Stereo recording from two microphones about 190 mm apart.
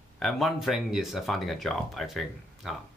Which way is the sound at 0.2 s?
Centre (ahead or behind).